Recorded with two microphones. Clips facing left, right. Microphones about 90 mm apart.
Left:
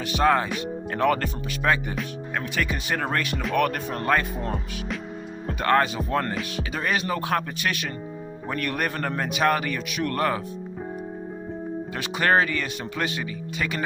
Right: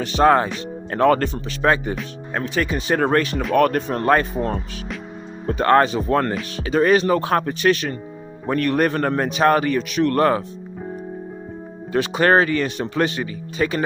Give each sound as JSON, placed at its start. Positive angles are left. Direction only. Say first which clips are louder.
{"t": 0.0, "sound": "a man's voice", "louder": "right 6 dB", "side_deg": -45}
{"t": 2.4, "sound": "speech", "louder": "right 6 dB", "side_deg": -25}
{"t": 2.9, "sound": "a man's voice", "louder": "right 10 dB", "side_deg": -45}
{"t": 5.5, "sound": "speech", "louder": "right 6 dB", "side_deg": -40}
{"t": 6.1, "sound": "speech", "louder": "right 6 dB", "side_deg": -60}
{"t": 6.6, "sound": "a man's voice", "louder": "right 12 dB", "side_deg": -40}
{"t": 12.1, "sound": "a man's voice", "louder": "right 4 dB", "side_deg": -45}